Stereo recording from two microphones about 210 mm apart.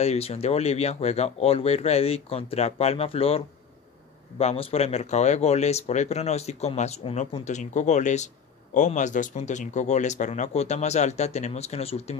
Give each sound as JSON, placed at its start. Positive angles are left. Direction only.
{"t": 0.0, "sound": "speech", "side_deg": 30}